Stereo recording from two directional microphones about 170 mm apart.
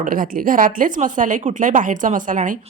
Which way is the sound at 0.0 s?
55° right (ahead or behind).